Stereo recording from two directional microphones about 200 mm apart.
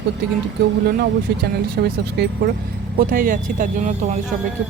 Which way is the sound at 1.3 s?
50° right (ahead or behind).